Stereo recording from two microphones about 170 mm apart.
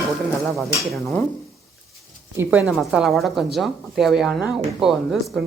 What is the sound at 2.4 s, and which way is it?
Speech, 10° right (ahead or behind).